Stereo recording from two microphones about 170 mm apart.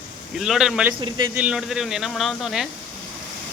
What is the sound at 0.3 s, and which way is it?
Speech, centre (ahead or behind).